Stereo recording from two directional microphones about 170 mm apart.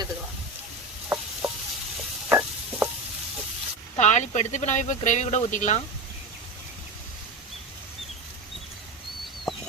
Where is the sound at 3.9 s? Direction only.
45° left (ahead or behind).